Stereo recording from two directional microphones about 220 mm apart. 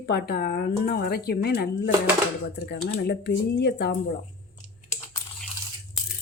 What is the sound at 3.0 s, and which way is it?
Speech, 50° left (ahead or behind).